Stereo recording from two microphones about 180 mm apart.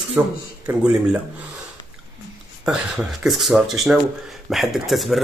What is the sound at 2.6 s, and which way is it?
Speech, 5° right (ahead or behind).